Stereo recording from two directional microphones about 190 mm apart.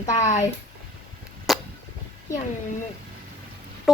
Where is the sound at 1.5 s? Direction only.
Centre (ahead or behind).